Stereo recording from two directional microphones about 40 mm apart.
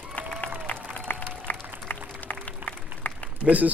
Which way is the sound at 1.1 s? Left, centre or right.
Left.